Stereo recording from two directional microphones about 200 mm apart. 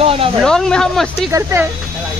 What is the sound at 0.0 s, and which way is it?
Speech, 30° right (ahead or behind).